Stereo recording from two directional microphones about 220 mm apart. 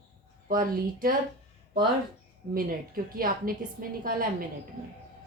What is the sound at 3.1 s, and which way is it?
A woman's voice, 40° right (ahead or behind).